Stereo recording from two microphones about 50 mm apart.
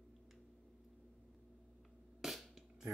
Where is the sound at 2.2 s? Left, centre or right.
Centre.